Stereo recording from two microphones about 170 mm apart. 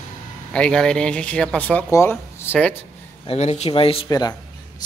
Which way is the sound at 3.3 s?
40° left (ahead or behind).